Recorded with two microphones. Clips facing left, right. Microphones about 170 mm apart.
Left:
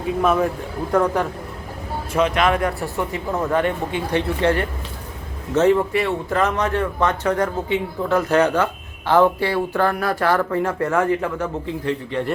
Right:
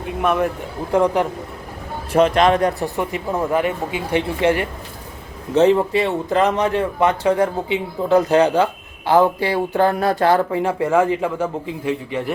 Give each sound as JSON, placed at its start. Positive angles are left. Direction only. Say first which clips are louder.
{"t": 0.2, "sound": "a man's voice", "louder": "even", "side_deg": 0}
{"t": 0.9, "sound": "speech", "louder": "right 2 dB", "side_deg": -15}
{"t": 2.1, "sound": "a man's voice", "louder": "right 4 dB", "side_deg": -35}
{"t": 2.8, "sound": "speech", "louder": "right 2 dB", "side_deg": -15}